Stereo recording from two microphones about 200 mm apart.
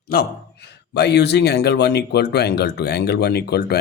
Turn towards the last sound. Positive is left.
turn(degrees=55)  # may be behind; listen again after turning